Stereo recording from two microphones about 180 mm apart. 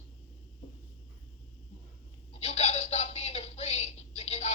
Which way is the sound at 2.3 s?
35° left (ahead or behind).